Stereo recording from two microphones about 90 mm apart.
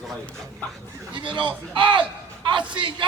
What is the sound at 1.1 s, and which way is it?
Speech, 65° right (ahead or behind).